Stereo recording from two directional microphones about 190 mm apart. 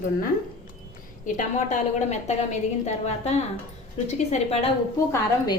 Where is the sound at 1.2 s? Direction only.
40° left (ahead or behind).